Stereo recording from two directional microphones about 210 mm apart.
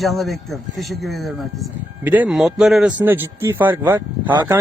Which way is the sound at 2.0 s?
5° right (ahead or behind).